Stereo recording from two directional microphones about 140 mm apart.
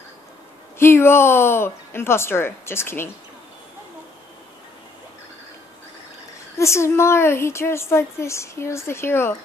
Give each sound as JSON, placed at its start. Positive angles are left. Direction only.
{"t": 0.7, "sound": "a woman's voice", "side_deg": 15}
{"t": 6.6, "sound": "a woman's voice", "side_deg": 20}